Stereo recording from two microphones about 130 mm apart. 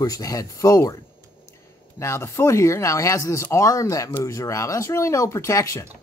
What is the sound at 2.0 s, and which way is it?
Speech, 20° left (ahead or behind).